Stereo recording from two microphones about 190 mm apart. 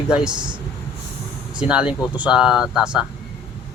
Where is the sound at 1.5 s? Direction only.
5° right (ahead or behind).